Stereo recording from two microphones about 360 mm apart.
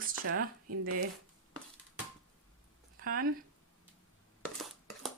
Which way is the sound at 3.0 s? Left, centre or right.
Right.